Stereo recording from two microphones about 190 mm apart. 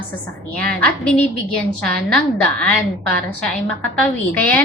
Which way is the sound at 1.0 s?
5° left (ahead or behind).